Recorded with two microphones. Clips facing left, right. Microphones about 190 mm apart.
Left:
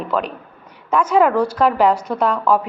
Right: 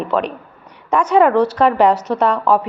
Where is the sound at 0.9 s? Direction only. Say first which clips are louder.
Right 2 dB; 5° left (ahead or behind).